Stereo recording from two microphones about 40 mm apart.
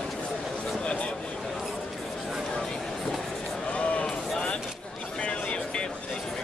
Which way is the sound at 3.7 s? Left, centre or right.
Left.